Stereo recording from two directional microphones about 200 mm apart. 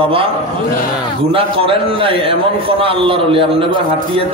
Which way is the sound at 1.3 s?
25° right (ahead or behind).